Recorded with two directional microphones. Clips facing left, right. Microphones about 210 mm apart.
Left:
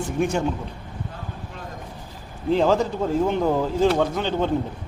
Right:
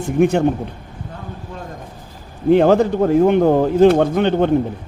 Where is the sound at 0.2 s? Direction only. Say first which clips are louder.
Right 9 dB; 60° right (ahead or behind).